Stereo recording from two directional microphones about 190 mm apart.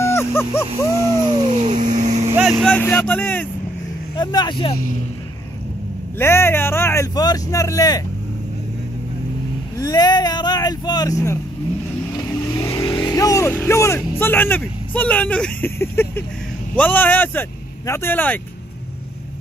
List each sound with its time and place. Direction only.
0.0 s dog: 15° left (ahead or behind)
1.1 s speech: 35° right (ahead or behind)
2.6 s a man's voice: 10° left (ahead or behind)
4.2 s speech: 20° left (ahead or behind)
6.1 s a man's voice: 15° left (ahead or behind)
9.8 s speech: 20° left (ahead or behind)
12.5 s a man's voice: 15° left (ahead or behind)